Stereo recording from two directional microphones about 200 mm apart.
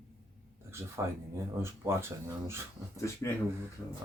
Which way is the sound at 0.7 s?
15° right (ahead or behind).